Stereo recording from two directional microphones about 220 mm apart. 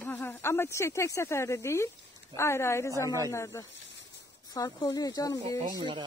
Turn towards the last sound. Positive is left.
turn(degrees=-20)  # may be behind; listen again after turning